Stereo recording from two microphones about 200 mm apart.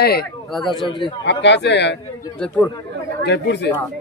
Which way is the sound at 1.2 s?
60° left (ahead or behind).